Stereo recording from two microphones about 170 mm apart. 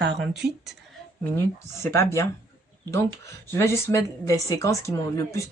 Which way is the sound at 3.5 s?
15° left (ahead or behind).